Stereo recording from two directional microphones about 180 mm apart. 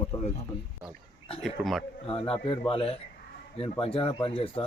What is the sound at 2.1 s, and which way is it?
A man's voice, 30° left (ahead or behind).